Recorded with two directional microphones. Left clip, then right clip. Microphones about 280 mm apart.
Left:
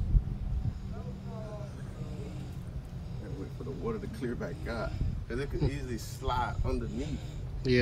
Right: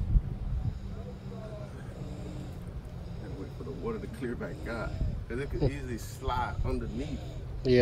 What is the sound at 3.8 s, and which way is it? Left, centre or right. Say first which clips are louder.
Speech: even; centre.